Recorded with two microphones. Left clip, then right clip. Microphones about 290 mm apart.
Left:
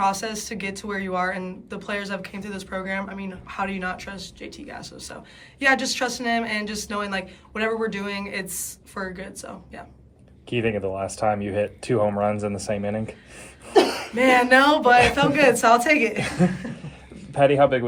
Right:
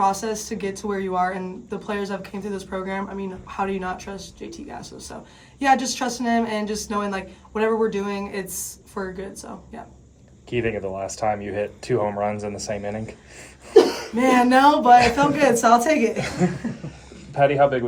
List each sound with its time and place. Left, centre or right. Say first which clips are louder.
0.0 s speech: right 2 dB; centre
10.5 s speech: even; left
14.2 s speech: even; centre
17.3 s speech: even; left